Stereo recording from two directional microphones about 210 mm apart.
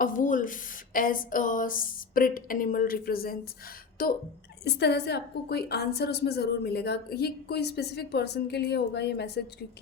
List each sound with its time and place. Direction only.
0.0 s a woman's voice: 40° left (ahead or behind)